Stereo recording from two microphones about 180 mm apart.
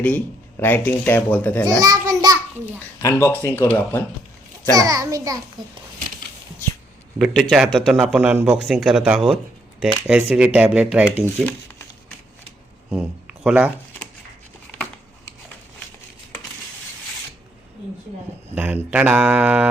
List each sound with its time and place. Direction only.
0.0 s speech: 10° left (ahead or behind)
1.6 s a child's voice: 20° right (ahead or behind)
2.7 s speech: 15° left (ahead or behind)
4.7 s a child's voice: 20° right (ahead or behind)
7.2 s a man's voice: centre (ahead or behind)
12.9 s speech: 5° right (ahead or behind)
18.5 s speech: 10° right (ahead or behind)